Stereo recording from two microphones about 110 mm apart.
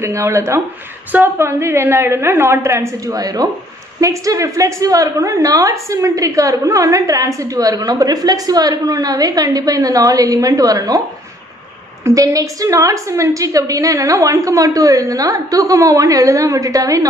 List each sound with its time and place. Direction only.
0.0 s a woman's voice: 25° right (ahead or behind)
12.0 s a woman's voice: 30° right (ahead or behind)